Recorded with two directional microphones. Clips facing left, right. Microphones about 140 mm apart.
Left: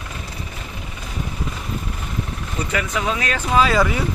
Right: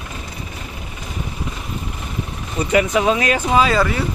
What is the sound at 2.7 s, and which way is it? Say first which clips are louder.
Speech: right 8 dB; 20° right (ahead or behind).